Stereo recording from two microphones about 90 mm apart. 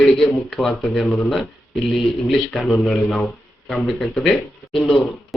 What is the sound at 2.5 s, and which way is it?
Speech, 5° left (ahead or behind).